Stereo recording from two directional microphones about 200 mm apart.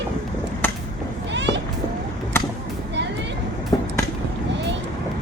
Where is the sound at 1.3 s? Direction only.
60° right (ahead or behind).